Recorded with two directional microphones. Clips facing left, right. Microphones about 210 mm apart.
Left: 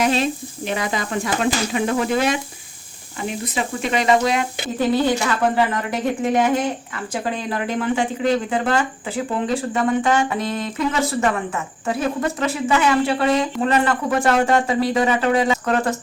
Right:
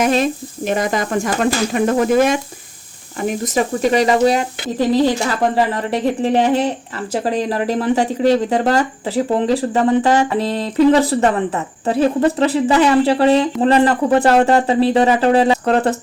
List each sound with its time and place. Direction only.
0.0 s speech: 45° right (ahead or behind)